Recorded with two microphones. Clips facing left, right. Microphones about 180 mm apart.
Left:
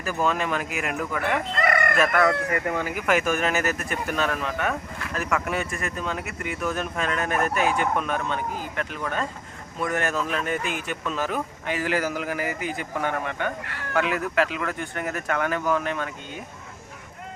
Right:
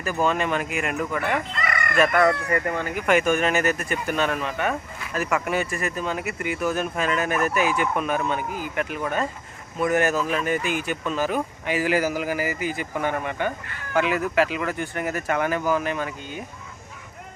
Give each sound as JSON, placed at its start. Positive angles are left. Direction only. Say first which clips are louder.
{"t": 0.0, "sound": "speech", "louder": "right 2 dB", "side_deg": 0}
{"t": 1.5, "sound": "chicken", "louder": "left 5 dB", "side_deg": 55}
{"t": 2.1, "sound": "speech", "louder": "right 2 dB", "side_deg": 5}